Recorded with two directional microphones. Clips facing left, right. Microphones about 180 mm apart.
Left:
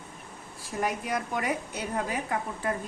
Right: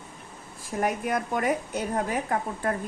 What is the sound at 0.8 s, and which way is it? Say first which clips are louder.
A woman's voice: right 3 dB; 50° right (ahead or behind).